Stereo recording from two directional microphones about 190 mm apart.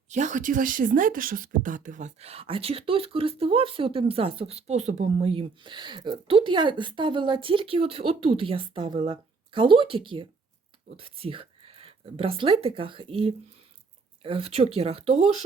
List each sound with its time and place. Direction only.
0.1 s speech: 40° right (ahead or behind)